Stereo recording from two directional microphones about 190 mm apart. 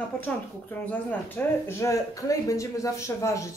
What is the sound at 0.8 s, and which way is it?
Speech, 15° left (ahead or behind).